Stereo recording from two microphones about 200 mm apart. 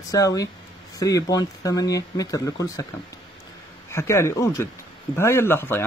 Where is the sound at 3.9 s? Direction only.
15° left (ahead or behind).